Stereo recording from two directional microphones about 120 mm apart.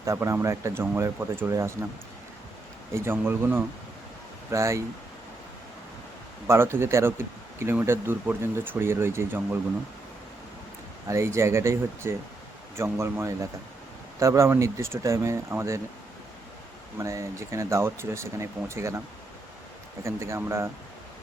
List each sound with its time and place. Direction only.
0.0 s speech: 25° right (ahead or behind)
2.9 s speech: 20° right (ahead or behind)
6.5 s speech: 20° right (ahead or behind)
11.1 s speech: 25° right (ahead or behind)
17.0 s speech: 25° right (ahead or behind)
20.1 s speech: 25° right (ahead or behind)